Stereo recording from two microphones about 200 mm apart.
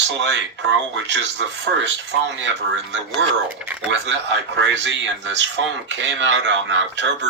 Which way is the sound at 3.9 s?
60° right (ahead or behind).